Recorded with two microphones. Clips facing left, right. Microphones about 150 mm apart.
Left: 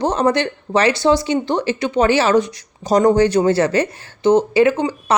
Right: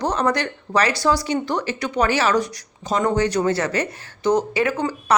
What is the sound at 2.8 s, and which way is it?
A woman's voice, 40° left (ahead or behind).